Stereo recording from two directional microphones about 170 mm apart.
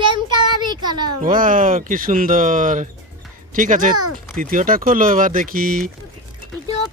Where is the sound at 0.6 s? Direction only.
25° right (ahead or behind).